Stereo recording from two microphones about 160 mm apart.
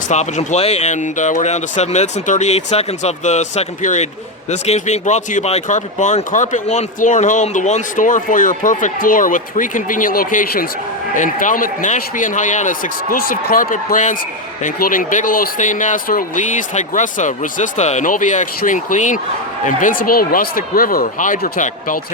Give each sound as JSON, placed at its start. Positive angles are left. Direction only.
{"t": 0.1, "sound": "speech", "side_deg": 45}